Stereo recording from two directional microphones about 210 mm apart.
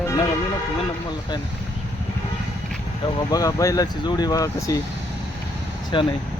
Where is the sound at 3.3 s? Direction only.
15° left (ahead or behind).